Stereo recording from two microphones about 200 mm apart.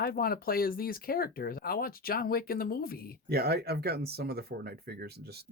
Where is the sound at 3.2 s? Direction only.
50° right (ahead or behind).